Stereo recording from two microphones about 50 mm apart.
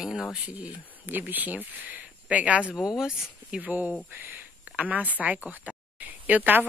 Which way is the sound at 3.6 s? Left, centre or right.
Right.